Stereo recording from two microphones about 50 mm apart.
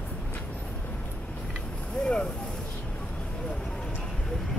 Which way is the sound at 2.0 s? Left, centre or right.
Left.